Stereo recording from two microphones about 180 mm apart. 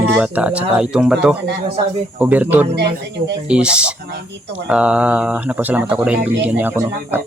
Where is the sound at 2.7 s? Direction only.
70° right (ahead or behind).